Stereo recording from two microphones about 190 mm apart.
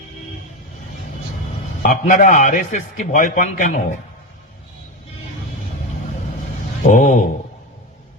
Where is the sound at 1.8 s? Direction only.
45° left (ahead or behind).